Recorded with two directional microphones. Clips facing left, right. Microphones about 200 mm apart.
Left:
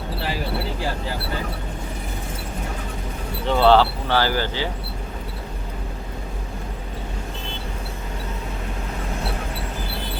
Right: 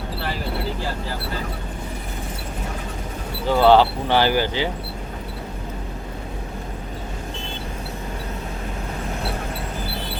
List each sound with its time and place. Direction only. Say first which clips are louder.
3.4 s speech: right 1 dB; 10° right (ahead or behind)